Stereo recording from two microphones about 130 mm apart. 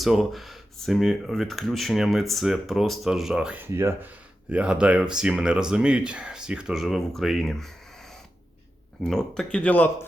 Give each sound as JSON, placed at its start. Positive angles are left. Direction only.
{"t": 0.0, "sound": "speech", "side_deg": 0}
{"t": 3.6, "sound": "speech", "side_deg": -15}
{"t": 9.0, "sound": "speech", "side_deg": 5}